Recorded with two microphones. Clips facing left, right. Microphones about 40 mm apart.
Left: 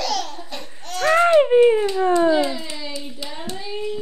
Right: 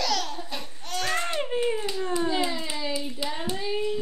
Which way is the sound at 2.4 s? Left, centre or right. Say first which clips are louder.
Left 2 dB; centre.